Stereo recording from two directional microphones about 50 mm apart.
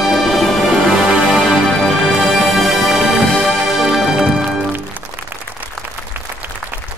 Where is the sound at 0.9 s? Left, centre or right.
Centre.